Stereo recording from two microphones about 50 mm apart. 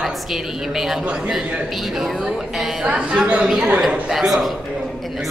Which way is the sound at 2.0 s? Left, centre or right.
Centre.